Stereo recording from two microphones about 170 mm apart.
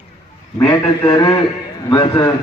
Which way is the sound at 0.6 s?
25° left (ahead or behind).